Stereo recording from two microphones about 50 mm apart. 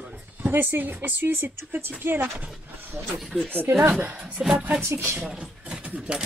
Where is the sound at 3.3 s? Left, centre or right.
Centre.